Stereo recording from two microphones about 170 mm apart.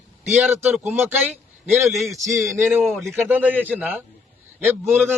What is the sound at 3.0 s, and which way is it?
A man's voice, 15° right (ahead or behind).